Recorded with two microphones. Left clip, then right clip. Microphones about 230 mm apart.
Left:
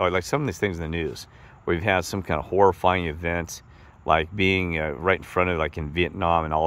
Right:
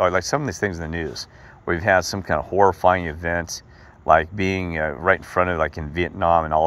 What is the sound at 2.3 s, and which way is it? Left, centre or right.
Speech, left.